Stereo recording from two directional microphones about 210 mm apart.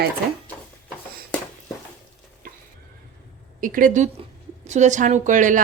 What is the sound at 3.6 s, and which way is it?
Speech, 40° right (ahead or behind).